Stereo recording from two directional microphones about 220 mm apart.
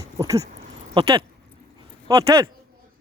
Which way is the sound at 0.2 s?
15° right (ahead or behind).